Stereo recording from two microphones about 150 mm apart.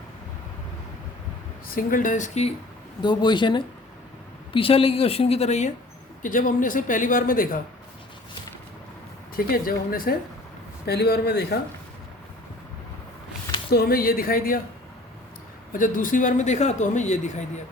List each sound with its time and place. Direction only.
1.6 s a man's voice: 70° left (ahead or behind); by 2.5 s 50° left (ahead or behind)
3.0 s a woman's voice: 30° left (ahead or behind); by 5.7 s 50° left (ahead or behind)
6.2 s a man's voice: 60° left (ahead or behind)
9.3 s speech: 75° left (ahead or behind)
10.8 s speech: 90° left
13.7 s speech: 90° left; by 14.6 s 70° left (ahead or behind)
15.7 s a man's voice: 65° left (ahead or behind)